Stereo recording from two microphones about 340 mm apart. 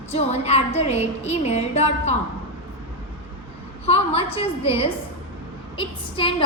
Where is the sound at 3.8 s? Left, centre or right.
Centre.